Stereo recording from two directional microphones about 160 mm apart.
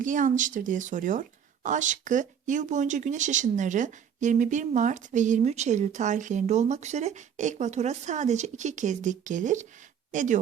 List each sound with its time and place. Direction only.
0.0 s speech: 55° right (ahead or behind)